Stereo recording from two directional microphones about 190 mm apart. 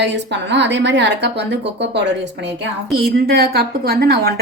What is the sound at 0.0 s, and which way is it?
A woman's voice, 70° right (ahead or behind).